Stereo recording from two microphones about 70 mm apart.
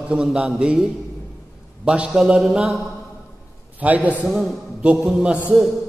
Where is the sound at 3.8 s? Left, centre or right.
Right.